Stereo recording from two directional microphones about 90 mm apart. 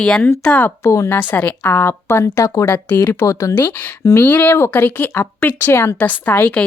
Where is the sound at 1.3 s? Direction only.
20° left (ahead or behind); by 2.7 s 40° left (ahead or behind).